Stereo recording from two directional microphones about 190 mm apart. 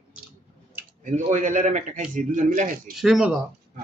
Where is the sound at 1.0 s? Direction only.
40° right (ahead or behind).